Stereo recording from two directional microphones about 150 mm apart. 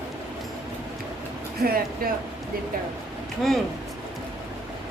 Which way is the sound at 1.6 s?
80° right.